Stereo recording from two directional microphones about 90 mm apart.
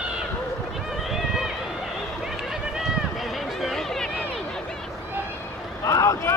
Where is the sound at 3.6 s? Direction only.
5° left (ahead or behind).